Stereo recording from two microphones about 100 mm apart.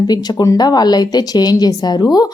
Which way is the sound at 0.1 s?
45° left (ahead or behind).